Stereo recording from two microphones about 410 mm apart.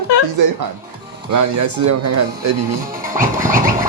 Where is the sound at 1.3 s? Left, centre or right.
Right.